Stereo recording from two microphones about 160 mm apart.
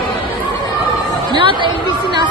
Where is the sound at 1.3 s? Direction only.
30° right (ahead or behind).